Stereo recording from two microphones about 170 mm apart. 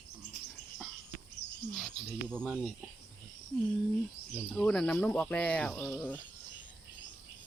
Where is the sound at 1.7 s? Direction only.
5° left (ahead or behind).